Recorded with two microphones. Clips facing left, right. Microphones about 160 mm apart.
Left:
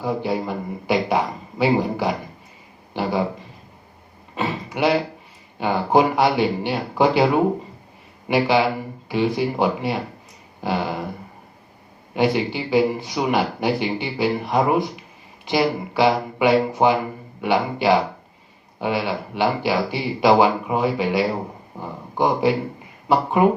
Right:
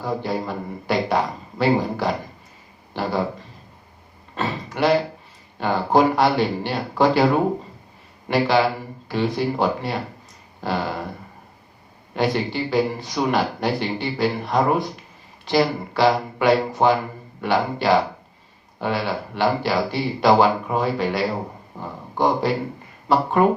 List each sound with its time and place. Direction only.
0.0 s speech: 10° left (ahead or behind)
4.4 s a sound: 10° left (ahead or behind)
5.5 s speech: 10° left (ahead or behind)
8.3 s speech: 10° left (ahead or behind)
12.1 s speech: 10° left (ahead or behind)